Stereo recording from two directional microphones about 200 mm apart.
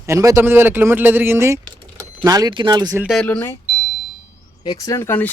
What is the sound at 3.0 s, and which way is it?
Speech, 5° left (ahead or behind).